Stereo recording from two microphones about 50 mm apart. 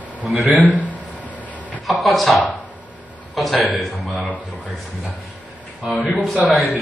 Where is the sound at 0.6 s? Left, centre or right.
Left.